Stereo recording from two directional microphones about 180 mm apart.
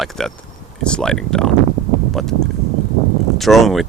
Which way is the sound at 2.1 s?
Centre (ahead or behind).